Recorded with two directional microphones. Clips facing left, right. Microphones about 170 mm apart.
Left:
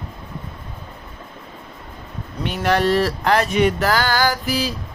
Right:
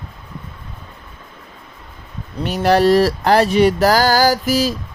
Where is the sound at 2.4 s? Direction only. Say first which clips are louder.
Right 5 dB; 40° right (ahead or behind).